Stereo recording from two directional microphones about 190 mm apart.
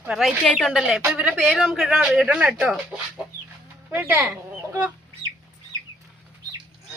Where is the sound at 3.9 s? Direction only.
10° right (ahead or behind).